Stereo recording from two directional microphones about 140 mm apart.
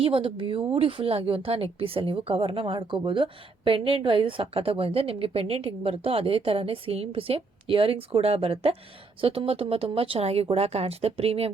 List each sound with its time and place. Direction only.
0.0 s a woman's voice: 40° right (ahead or behind)